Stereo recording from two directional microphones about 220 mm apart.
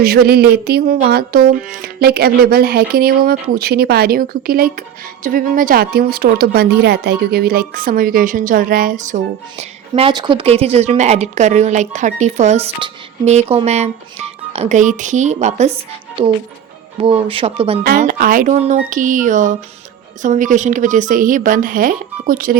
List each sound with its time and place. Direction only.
0.0 s a sound: 45° right (ahead or behind)
5.2 s speech: 40° right (ahead or behind)
17.8 s speech: 40° right (ahead or behind)